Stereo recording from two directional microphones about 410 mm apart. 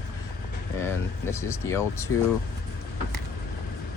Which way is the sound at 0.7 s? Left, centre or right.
Centre.